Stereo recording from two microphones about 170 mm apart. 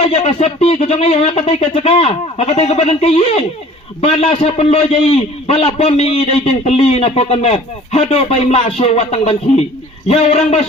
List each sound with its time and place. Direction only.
0.0 s a man's voice: 35° left (ahead or behind)